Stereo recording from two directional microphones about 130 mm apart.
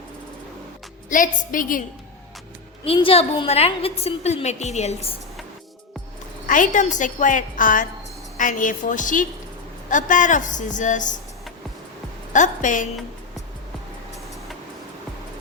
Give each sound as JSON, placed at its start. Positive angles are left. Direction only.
{"t": 1.1, "sound": "a woman's voice", "side_deg": 90}
{"t": 2.8, "sound": "a woman's voice", "side_deg": 45}
{"t": 6.5, "sound": "a woman's voice", "side_deg": 75}
{"t": 12.3, "sound": "a woman's voice", "side_deg": 75}